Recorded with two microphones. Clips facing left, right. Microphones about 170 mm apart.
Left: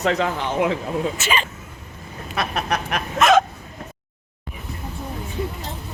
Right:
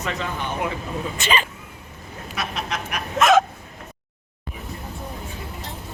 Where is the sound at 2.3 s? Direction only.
55° left (ahead or behind).